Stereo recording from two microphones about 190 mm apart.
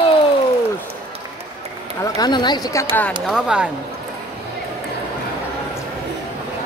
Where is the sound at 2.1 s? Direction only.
20° left (ahead or behind).